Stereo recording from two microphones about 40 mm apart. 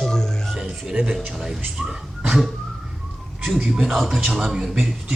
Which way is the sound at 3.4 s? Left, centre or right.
Centre.